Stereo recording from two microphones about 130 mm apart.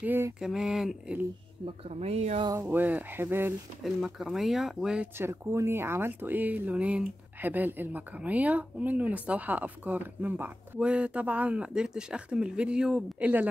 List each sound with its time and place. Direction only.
0.0 s speech: 15° right (ahead or behind)
0.4 s speech: 5° right (ahead or behind)
1.9 s speech: 55° right (ahead or behind)
2.6 s speech: 15° right (ahead or behind)
3.8 s speech: centre (ahead or behind)
5.1 s speech: 20° right (ahead or behind)